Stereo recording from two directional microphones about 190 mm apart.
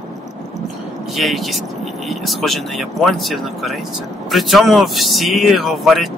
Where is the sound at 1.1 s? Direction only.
Centre (ahead or behind).